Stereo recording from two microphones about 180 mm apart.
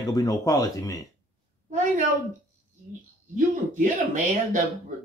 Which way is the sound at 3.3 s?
45° right (ahead or behind).